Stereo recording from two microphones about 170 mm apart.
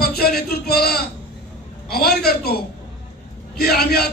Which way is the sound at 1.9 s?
65° left (ahead or behind).